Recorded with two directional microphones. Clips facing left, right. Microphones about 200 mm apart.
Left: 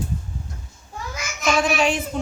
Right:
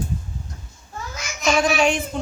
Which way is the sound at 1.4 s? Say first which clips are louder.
Right 1 dB; 5° left (ahead or behind).